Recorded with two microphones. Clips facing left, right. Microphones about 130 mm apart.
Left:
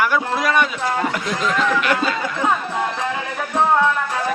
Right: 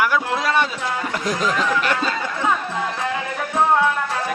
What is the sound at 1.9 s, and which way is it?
Speech, 5° left (ahead or behind).